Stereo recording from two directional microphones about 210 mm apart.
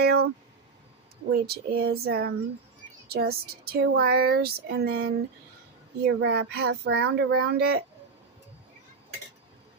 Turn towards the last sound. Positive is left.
turn(degrees=-50)  # may be behind; listen again after turning